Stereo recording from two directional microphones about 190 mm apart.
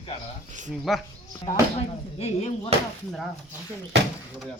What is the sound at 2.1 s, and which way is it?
Speech, 30° left (ahead or behind).